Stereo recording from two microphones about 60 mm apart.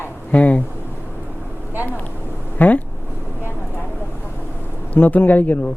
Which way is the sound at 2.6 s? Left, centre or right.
Left.